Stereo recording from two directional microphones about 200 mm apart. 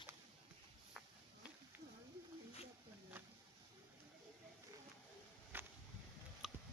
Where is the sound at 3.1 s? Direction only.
10° right (ahead or behind).